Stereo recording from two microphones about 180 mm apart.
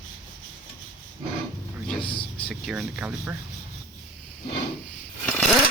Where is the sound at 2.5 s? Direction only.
Centre (ahead or behind).